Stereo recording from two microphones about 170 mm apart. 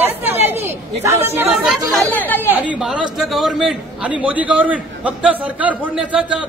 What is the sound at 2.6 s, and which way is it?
A man's voice, 5° right (ahead or behind).